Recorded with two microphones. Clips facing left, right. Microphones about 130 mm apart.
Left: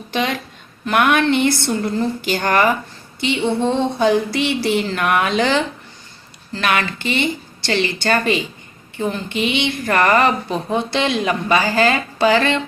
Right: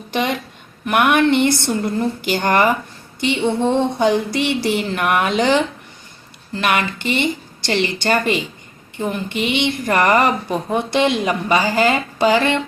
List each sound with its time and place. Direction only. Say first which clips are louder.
0.1 s a woman's voice: right 1 dB; 20° right (ahead or behind)